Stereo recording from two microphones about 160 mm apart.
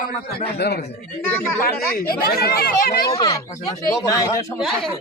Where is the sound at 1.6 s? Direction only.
70° left (ahead or behind).